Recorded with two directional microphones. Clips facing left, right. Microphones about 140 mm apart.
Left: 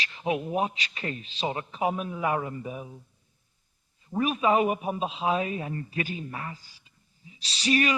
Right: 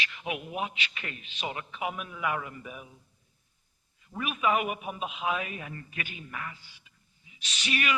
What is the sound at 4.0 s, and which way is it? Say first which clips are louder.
A man's voice: left 5 dB; 35° left (ahead or behind).